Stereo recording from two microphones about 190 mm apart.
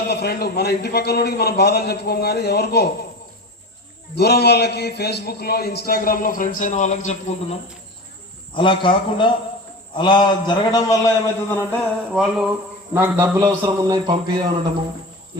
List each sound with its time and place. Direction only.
0.1 s a man's voice: 55° left (ahead or behind)
4.1 s a man's voice: 55° left (ahead or behind); by 7.6 s 35° left (ahead or behind)
8.5 s a man's voice: 25° left (ahead or behind)
12.1 s a sound: centre (ahead or behind)
12.9 s a man's voice: 15° right (ahead or behind)